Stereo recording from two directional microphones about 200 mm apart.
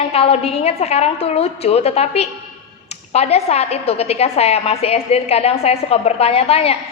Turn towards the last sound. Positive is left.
turn(degrees=30)  # may be behind; listen again after turning